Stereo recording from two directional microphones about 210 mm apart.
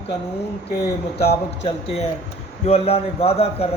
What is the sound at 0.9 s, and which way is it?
A man's voice, 30° left (ahead or behind).